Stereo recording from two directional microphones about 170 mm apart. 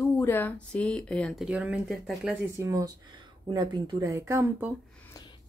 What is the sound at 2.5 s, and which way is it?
Speech, 20° right (ahead or behind).